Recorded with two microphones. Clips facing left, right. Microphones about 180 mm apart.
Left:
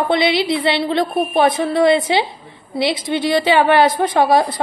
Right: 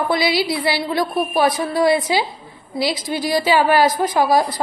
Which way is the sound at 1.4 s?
60° left (ahead or behind).